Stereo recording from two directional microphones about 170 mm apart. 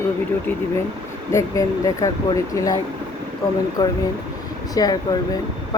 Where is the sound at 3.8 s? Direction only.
20° left (ahead or behind).